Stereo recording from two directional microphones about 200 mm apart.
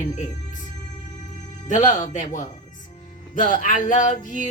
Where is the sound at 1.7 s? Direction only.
40° left (ahead or behind).